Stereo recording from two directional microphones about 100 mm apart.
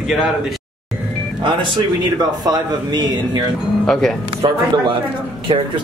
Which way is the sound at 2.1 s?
45° right (ahead or behind).